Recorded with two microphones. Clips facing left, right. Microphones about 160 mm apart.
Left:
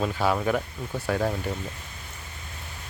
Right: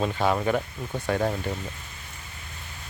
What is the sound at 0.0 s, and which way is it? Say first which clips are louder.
Speech: right 1 dB; centre (ahead or behind).